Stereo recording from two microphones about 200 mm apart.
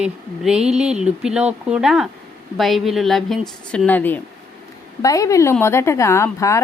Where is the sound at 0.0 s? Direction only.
5° right (ahead or behind).